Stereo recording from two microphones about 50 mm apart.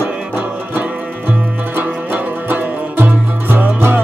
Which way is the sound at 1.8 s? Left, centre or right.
Right.